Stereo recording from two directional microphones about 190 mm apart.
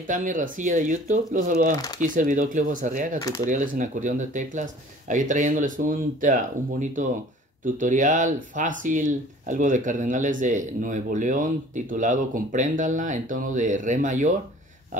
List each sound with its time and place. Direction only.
0.0 s speech: 45° right (ahead or behind)
3.2 s speech: 15° left (ahead or behind)
3.4 s speech: 45° right (ahead or behind)